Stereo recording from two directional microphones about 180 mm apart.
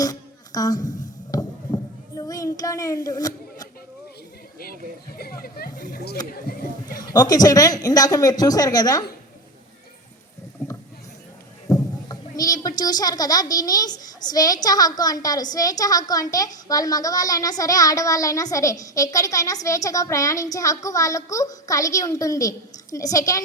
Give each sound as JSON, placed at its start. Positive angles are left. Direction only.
{"t": 0.0, "sound": "music", "side_deg": 20}
{"t": 4.6, "sound": "speech", "side_deg": 55}
{"t": 6.8, "sound": "a woman's voice", "side_deg": 20}
{"t": 11.7, "sound": "rowboat", "side_deg": 20}
{"t": 12.4, "sound": "a woman's voice", "side_deg": 20}